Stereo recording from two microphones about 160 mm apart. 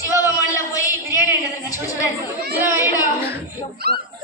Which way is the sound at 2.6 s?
10° right (ahead or behind).